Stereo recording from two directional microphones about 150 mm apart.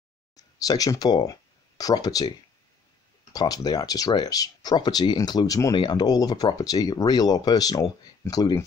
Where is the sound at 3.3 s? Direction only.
25° left (ahead or behind).